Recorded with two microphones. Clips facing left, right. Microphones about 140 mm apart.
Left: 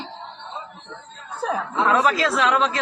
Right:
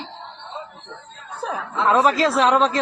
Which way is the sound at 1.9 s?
35° right (ahead or behind).